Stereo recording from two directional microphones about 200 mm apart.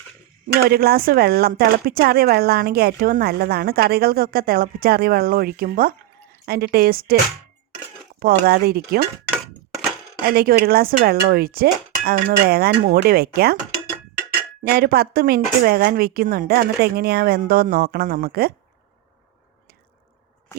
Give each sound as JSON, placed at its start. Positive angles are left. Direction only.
{"t": 0.4, "sound": "speech", "side_deg": -50}
{"t": 8.2, "sound": "speech", "side_deg": -50}
{"t": 10.2, "sound": "speech", "side_deg": -50}
{"t": 14.6, "sound": "speech", "side_deg": -50}